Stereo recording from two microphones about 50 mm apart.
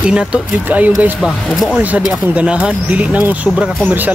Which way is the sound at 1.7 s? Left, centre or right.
Right.